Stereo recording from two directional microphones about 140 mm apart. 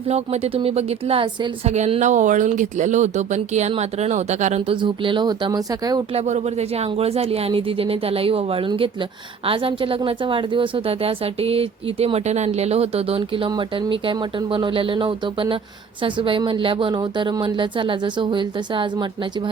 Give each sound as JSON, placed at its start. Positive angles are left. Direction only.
{"t": 0.1, "sound": "speech", "side_deg": -50}
{"t": 1.7, "sound": "speech", "side_deg": -55}
{"t": 4.7, "sound": "speech", "side_deg": -35}
{"t": 6.1, "sound": "speech", "side_deg": -55}